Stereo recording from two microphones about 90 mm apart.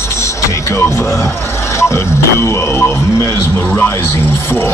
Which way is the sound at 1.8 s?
30° left (ahead or behind).